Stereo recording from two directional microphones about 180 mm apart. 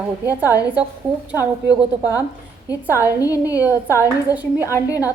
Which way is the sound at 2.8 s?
10° right (ahead or behind).